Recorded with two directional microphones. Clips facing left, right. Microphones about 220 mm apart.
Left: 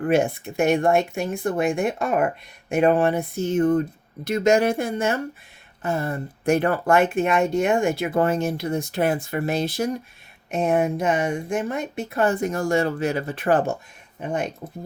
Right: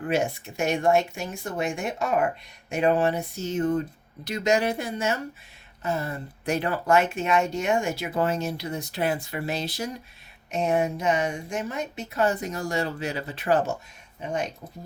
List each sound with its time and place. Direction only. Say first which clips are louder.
0.1 s speech: left 5 dB; 55° left (ahead or behind)